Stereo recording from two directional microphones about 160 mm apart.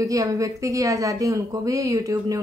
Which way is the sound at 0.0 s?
20° right (ahead or behind).